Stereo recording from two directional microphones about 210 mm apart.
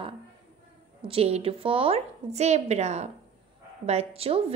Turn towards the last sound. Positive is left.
turn(degrees=-30)  # may be behind; listen again after turning